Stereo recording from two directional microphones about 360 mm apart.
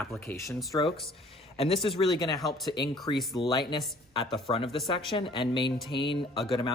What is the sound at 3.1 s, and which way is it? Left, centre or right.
Speech, centre.